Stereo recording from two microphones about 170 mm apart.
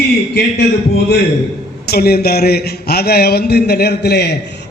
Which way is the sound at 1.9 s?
65° left (ahead or behind).